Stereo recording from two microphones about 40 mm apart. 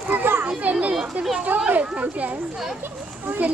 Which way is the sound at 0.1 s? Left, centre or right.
Right.